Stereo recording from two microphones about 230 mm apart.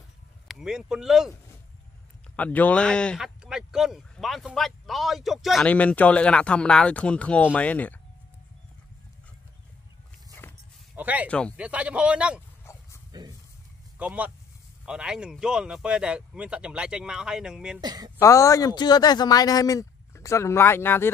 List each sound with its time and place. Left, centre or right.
0.5 s speech: centre
2.3 s a man's voice: centre
10.4 s sheep: centre
11.0 s speech: centre
11.2 s speech: centre
12.7 s a sound: centre
13.1 s a sound: centre
13.9 s speech: centre
17.7 s speech: centre
18.2 s a man's voice: centre